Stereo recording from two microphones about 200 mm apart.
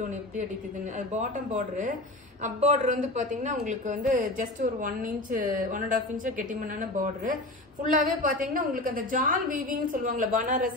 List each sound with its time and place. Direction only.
0.9 s a man's voice: 40° right (ahead or behind)